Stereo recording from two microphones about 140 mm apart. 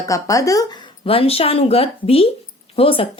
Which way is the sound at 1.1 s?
45° left (ahead or behind).